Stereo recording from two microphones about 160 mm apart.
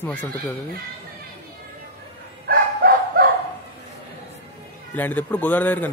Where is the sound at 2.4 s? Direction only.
70° right (ahead or behind).